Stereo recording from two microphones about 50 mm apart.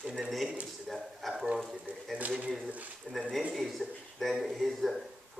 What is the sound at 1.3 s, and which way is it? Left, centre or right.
Speech, centre.